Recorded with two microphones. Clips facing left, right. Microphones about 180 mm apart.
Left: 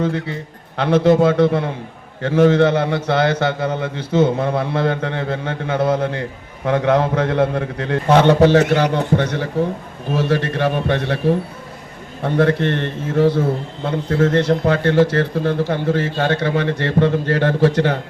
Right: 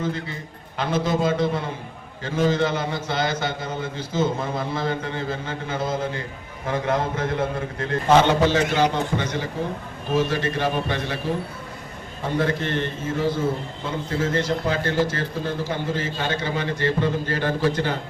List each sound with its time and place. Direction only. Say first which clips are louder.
0.0 s a man's voice: left 7 dB; 70° left (ahead or behind)